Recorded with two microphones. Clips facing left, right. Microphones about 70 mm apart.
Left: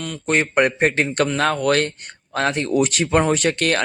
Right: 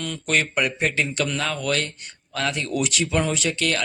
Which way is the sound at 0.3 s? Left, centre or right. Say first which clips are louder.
Left 5 dB; left.